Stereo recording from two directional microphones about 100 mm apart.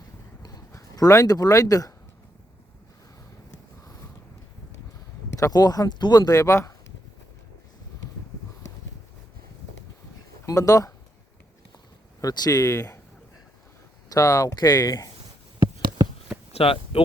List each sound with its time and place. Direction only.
0.4 s speech: 35° left (ahead or behind)
5.4 s speech: 40° left (ahead or behind)
10.4 s speech: 35° left (ahead or behind)
12.2 s speech: 40° left (ahead or behind)
14.1 s speech: 35° left (ahead or behind)
16.5 s a sound: 75° left (ahead or behind)